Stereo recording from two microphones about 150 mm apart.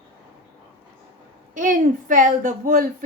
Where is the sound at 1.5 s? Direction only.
60° right (ahead or behind).